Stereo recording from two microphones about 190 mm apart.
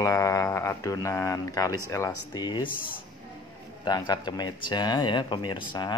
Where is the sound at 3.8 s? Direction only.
20° left (ahead or behind).